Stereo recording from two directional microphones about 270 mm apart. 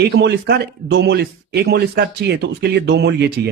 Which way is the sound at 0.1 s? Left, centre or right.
Right.